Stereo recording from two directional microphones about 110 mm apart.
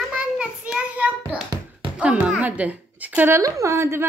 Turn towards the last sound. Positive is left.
turn(degrees=-25)  # may be behind; listen again after turning